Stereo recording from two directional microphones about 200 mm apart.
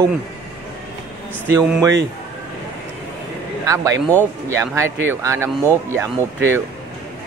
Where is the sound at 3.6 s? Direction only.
15° right (ahead or behind).